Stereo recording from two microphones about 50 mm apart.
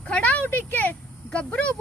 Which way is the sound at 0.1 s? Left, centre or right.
Left.